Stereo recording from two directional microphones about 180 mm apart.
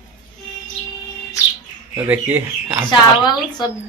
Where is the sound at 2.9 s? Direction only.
25° left (ahead or behind).